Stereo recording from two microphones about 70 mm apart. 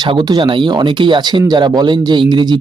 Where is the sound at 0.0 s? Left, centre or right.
Right.